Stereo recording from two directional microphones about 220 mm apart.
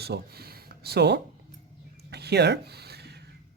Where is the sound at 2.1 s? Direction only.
50° right (ahead or behind).